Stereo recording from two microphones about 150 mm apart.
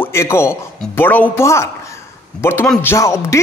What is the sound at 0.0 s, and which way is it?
A man's voice, 15° left (ahead or behind).